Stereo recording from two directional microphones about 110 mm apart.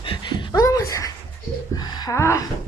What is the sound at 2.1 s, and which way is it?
Speech, 25° left (ahead or behind).